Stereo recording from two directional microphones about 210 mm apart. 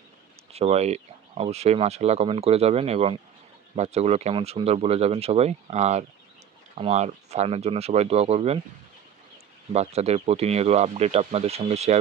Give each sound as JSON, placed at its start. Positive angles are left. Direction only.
{"t": 0.5, "sound": "speech", "side_deg": -30}
{"t": 9.7, "sound": "speech", "side_deg": -30}